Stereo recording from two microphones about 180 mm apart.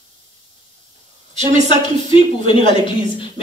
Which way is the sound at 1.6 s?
30° left (ahead or behind).